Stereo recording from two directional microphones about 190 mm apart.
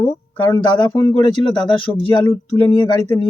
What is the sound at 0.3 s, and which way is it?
Speech, 10° left (ahead or behind).